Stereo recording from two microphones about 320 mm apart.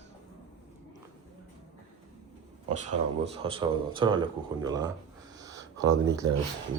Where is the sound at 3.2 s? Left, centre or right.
Centre.